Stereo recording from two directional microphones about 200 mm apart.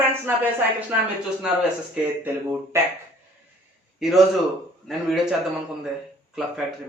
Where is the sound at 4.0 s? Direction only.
Centre (ahead or behind).